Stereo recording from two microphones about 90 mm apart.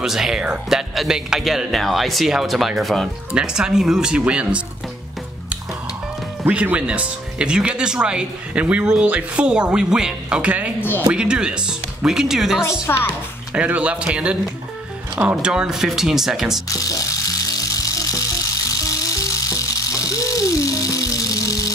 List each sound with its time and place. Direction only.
0.0 s speech: 5° right (ahead or behind)
6.4 s speech: 15° right (ahead or behind)
12.9 s speech: 35° left (ahead or behind)
13.5 s speech: 15° right (ahead or behind)
16.6 s music: 40° left (ahead or behind)